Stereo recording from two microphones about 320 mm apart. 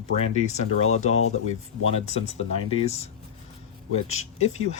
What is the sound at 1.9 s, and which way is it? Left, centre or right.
Speech, centre.